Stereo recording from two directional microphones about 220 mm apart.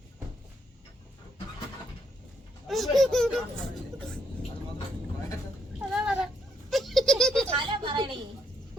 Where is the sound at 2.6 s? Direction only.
Centre (ahead or behind).